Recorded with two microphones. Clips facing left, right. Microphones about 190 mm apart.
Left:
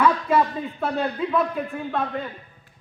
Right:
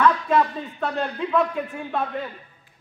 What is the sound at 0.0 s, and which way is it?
Speech, 5° left (ahead or behind).